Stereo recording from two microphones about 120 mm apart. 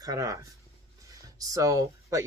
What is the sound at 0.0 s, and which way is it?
Speech, 30° right (ahead or behind).